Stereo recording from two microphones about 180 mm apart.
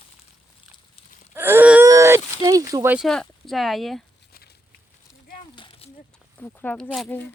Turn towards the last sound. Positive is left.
turn(degrees=10)  # may be behind; listen again after turning